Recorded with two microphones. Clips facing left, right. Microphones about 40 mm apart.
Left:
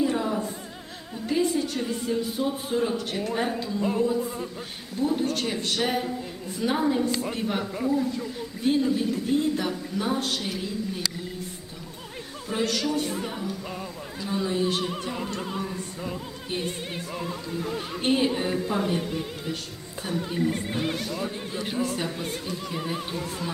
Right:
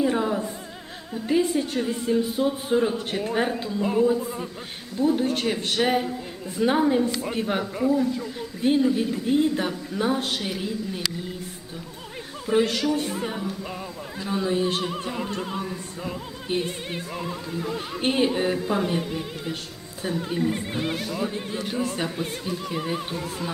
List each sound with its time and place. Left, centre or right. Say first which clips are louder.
0.0 s music: right 2 dB; centre
1.1 s a man's voice: right 2 dB; centre
1.7 s music: right 4 dB; centre
3.2 s a man's voice: right 3 dB; right
3.6 s music: right 3 dB; centre
5.0 s a man's voice: right 3 dB; right
5.5 s music: right 3 dB; right
8.6 s a man's voice: right 2 dB; centre
10.4 s music: right 2 dB; centre
12.8 s music: right 2 dB; centre
20.0 s speech: right 2 dB; centre
20.2 s music: even; centre